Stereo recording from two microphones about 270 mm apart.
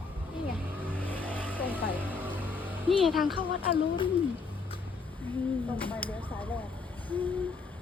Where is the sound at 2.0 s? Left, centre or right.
Centre.